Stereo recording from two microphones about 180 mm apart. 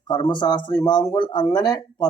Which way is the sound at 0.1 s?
25° left (ahead or behind).